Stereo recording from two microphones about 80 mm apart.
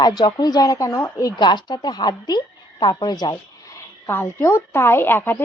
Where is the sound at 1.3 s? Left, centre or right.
Left.